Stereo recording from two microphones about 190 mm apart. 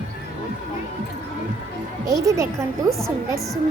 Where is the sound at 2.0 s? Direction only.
15° right (ahead or behind).